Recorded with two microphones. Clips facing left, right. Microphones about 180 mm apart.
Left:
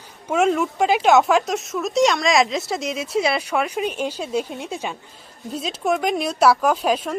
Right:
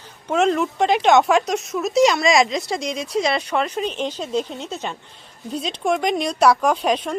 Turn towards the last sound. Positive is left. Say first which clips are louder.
# even
turn(degrees=5)  # may be behind; listen again after turning